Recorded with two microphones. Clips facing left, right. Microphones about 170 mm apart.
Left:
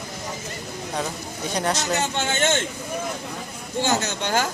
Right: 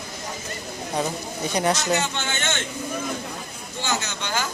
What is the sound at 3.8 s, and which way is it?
Speech, 40° left (ahead or behind).